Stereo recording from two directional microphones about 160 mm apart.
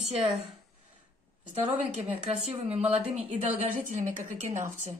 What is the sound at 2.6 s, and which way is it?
A woman's voice, 40° right (ahead or behind).